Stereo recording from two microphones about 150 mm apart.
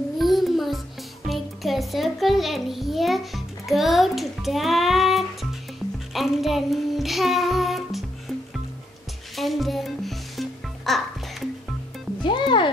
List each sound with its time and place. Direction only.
0.2 s music: centre (ahead or behind)
9.3 s music: centre (ahead or behind)
12.2 s music: 30° left (ahead or behind)